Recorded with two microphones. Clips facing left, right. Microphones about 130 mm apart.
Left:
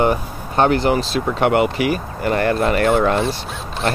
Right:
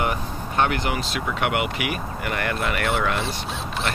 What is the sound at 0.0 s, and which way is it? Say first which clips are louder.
Speech: left 7 dB; 35° left (ahead or behind).